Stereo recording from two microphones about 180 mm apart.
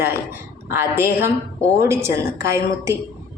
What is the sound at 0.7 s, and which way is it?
A woman's voice, 15° right (ahead or behind).